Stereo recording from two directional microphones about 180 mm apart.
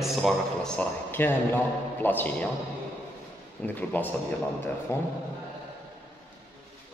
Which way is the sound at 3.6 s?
10° left (ahead or behind).